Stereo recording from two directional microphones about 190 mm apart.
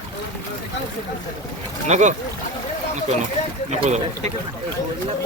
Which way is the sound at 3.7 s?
35° right (ahead or behind).